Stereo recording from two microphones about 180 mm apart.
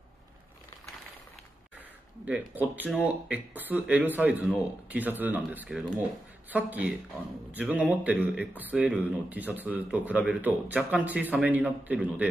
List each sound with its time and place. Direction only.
2.2 s speech: 10° right (ahead or behind)